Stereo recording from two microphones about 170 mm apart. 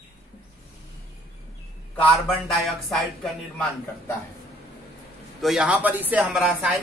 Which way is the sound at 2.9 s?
Centre (ahead or behind).